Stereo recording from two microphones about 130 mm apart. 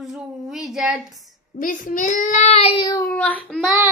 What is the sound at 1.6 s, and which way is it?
A child's voice, 90° left.